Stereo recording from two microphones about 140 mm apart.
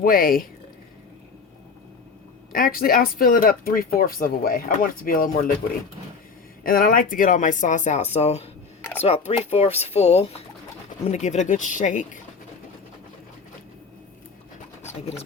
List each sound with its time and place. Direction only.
0.0 s speech: 90° left
2.5 s speech: 90° left
6.6 s speech: 90° left; by 12.0 s 65° left (ahead or behind)